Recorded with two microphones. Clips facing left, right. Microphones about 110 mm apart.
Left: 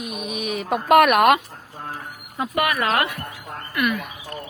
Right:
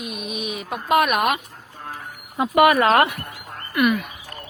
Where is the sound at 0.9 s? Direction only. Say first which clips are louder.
Left 5 dB; 65° left (ahead or behind).